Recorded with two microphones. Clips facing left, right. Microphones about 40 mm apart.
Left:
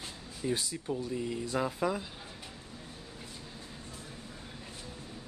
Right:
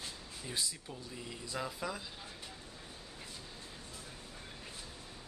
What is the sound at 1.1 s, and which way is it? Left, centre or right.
Speech, centre.